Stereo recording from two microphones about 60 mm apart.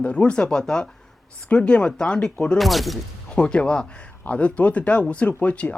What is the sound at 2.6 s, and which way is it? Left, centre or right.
Speech, centre.